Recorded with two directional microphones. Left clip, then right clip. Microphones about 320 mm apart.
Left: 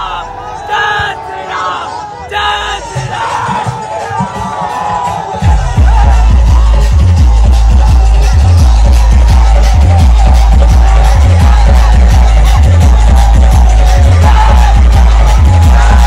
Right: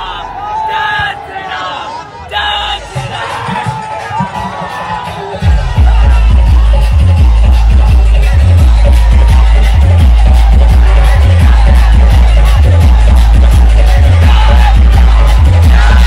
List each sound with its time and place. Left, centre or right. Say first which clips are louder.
0.7 s crowd: left 5 dB; left
2.3 s yell: left 1 dB; centre